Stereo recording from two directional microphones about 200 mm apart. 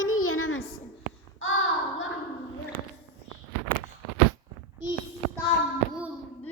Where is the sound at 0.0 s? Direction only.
90° left.